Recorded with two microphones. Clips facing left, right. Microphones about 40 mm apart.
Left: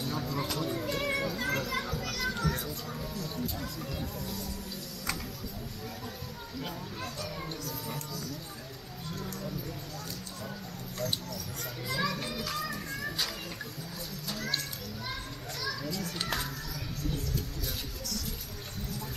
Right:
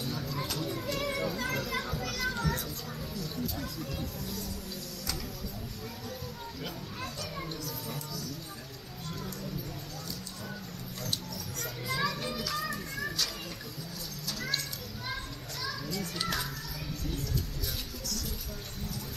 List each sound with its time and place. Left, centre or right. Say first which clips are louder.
0.1 s a sound: left 2 dB; centre
0.8 s music: left 1 dB; centre
1.2 s music: even; centre
1.7 s children playing: even; centre
3.5 s a sound: even; centre
7.6 s music: left 1 dB; centre
11.9 s children playing: even; centre
12.5 s music: right 1 dB; centre
16.2 s children playing: right 1 dB; centre